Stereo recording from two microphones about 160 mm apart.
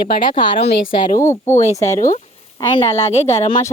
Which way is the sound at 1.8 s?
50° left (ahead or behind).